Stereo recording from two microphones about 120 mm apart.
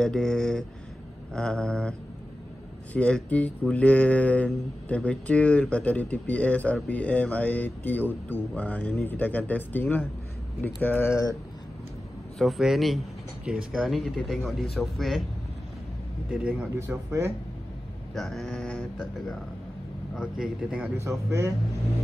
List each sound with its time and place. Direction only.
0.0 s speech: 5° left (ahead or behind); by 11.3 s 25° left (ahead or behind)
12.4 s speech: centre (ahead or behind)
16.7 s speech: 25° right (ahead or behind)
18.1 s speech: 5° left (ahead or behind)
20.2 s speech: 5° right (ahead or behind)
21.0 s speech: 25° right (ahead or behind)